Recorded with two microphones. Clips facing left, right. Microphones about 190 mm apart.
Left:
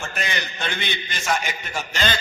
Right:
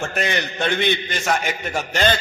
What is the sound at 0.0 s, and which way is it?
A man's voice, 60° right (ahead or behind).